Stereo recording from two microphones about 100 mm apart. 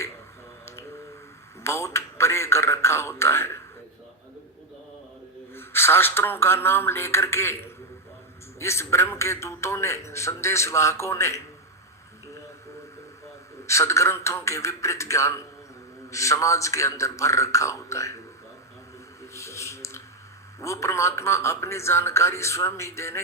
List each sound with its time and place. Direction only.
1.6 s a man's voice: 25° left (ahead or behind)
5.5 s a man's voice: 25° left (ahead or behind)
13.7 s a man's voice: 30° left (ahead or behind)
19.3 s a sound: 30° left (ahead or behind)
20.6 s a man's voice: 30° left (ahead or behind)